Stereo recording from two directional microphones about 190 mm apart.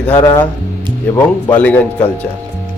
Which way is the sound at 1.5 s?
10° left (ahead or behind).